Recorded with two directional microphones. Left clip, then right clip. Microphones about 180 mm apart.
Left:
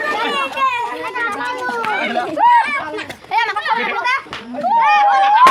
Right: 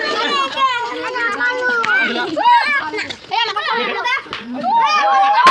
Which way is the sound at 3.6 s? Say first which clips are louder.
Left 1 dB; 25° right (ahead or behind).